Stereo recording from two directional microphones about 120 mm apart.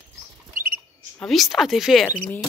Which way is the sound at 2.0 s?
15° left (ahead or behind).